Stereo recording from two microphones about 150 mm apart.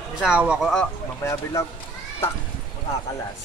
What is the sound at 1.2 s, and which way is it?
Speech, 20° left (ahead or behind).